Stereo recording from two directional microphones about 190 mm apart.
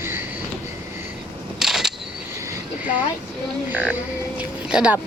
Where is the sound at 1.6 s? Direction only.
5° right (ahead or behind).